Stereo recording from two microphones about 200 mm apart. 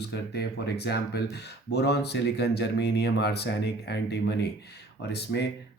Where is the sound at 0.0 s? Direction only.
55° left (ahead or behind).